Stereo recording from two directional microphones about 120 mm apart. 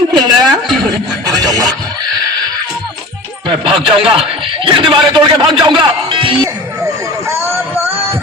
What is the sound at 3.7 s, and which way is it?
Speech, 50° right (ahead or behind).